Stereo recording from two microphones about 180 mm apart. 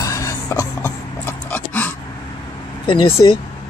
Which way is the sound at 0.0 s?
20° left (ahead or behind).